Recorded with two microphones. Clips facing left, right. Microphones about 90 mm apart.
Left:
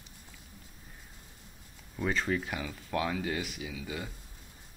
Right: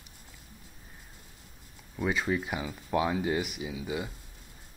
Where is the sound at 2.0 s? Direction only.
10° right (ahead or behind).